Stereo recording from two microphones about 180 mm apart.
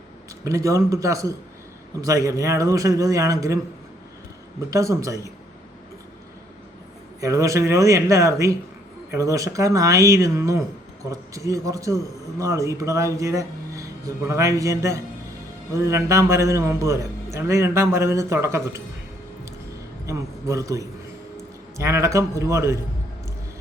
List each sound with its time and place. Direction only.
0.4 s a man's voice: 15° right (ahead or behind)
4.7 s a man's voice: 15° right (ahead or behind)
7.2 s a man's voice: 15° right (ahead or behind)
20.1 s a man's voice: 15° right (ahead or behind)